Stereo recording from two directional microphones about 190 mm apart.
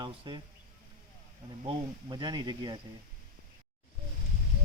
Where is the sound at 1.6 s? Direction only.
25° right (ahead or behind).